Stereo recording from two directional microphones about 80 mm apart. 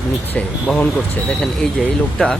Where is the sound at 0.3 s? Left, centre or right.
Centre.